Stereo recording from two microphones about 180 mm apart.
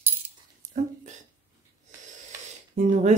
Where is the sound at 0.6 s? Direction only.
40° right (ahead or behind).